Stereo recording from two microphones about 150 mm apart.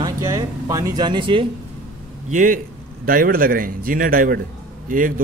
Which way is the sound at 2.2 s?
60° right (ahead or behind).